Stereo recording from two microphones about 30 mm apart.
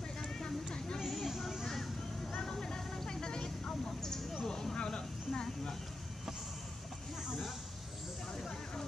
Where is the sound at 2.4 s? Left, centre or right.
Centre.